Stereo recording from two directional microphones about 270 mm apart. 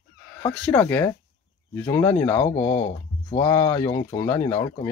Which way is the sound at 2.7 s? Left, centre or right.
Left.